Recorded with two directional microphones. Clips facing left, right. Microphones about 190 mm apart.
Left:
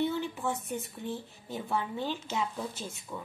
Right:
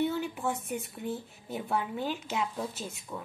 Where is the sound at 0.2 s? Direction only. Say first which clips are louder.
Right 1 dB; 10° right (ahead or behind).